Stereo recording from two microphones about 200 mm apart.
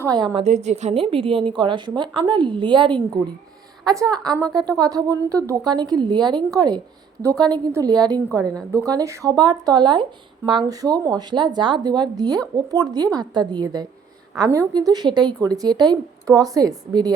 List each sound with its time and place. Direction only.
0.0 s a woman's voice: 20° right (ahead or behind)
0.4 s a woman's voice: 35° right (ahead or behind); by 17.1 s 20° right (ahead or behind)